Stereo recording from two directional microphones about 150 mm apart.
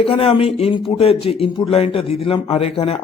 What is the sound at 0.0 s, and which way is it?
A man's voice, 40° left (ahead or behind).